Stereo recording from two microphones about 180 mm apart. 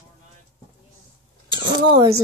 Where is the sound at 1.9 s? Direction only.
30° right (ahead or behind).